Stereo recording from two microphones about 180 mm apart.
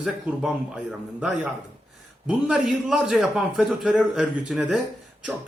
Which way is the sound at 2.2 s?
Centre (ahead or behind).